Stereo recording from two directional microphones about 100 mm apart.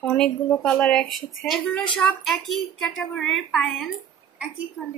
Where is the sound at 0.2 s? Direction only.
10° left (ahead or behind).